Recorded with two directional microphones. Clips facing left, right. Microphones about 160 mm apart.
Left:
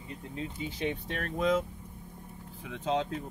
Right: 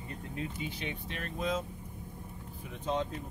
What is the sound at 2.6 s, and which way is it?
Speech, 90° left.